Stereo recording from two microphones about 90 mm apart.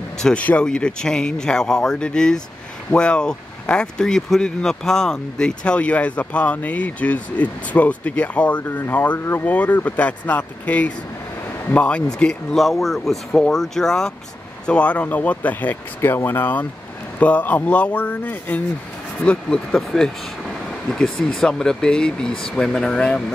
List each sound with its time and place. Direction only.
0.2 s speech: 15° left (ahead or behind)